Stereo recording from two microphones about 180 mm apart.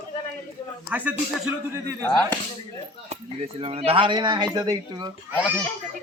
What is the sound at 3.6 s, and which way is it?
Speech, 30° right (ahead or behind).